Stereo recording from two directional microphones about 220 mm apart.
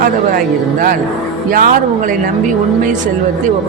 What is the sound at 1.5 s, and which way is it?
Speech, 40° right (ahead or behind).